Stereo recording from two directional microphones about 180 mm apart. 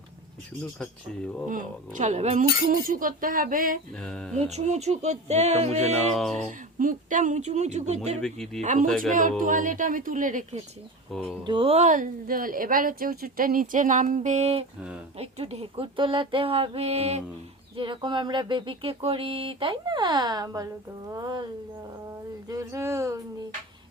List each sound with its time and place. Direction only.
1.5 s a woman's voice: 45° right (ahead or behind)
4.0 s speech: centre (ahead or behind)
4.4 s speech: 35° right (ahead or behind)
8.2 s speech: centre (ahead or behind)
8.6 s a woman's voice: 45° right (ahead or behind)
11.4 s a woman's voice: 30° right (ahead or behind)
22.4 s speech: 20° right (ahead or behind)